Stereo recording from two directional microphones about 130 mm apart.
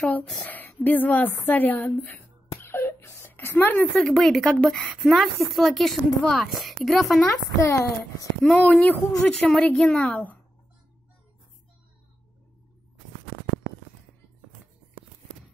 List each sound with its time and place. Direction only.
0.5 s a woman's voice: 15° left (ahead or behind)
2.6 s whimper: 20° left (ahead or behind)
4.0 s a woman's voice: centre (ahead or behind)
7.4 s a child's voice: 25° left (ahead or behind)
8.4 s a woman's voice: 10° left (ahead or behind)